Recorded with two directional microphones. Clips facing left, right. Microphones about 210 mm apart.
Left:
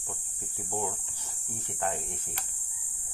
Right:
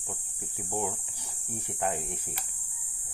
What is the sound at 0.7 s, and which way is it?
Speech, 15° right (ahead or behind).